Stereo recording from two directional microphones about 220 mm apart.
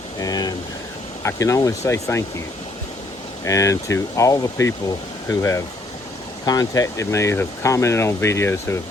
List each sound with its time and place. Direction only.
0.2 s speech: 15° left (ahead or behind)
3.4 s speech: 15° left (ahead or behind)